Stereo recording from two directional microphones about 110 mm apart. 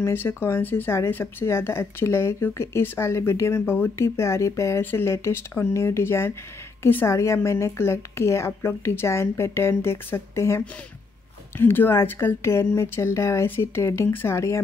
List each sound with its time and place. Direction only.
0.0 s speech: 20° left (ahead or behind)